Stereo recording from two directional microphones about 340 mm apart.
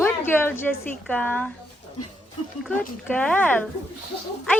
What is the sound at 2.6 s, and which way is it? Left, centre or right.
A woman's voice, centre.